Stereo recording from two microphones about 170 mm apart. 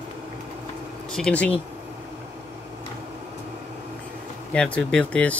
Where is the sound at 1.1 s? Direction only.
5° left (ahead or behind).